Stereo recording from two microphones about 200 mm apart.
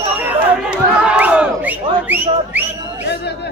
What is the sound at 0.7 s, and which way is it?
Whistling, 5° right (ahead or behind).